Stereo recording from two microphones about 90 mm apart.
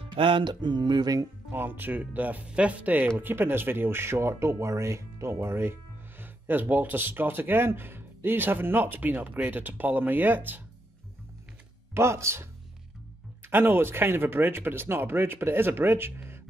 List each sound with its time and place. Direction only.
0.0 s music: 70° right (ahead or behind); by 1.2 s 50° right (ahead or behind)
1.5 s speech: 20° right (ahead or behind)
11.9 s speech: 30° right (ahead or behind)